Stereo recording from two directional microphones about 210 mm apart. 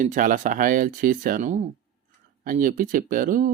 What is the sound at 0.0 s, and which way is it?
Speech, 40° right (ahead or behind).